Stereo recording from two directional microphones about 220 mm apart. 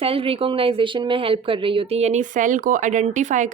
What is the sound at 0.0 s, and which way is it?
Speech, 25° right (ahead or behind).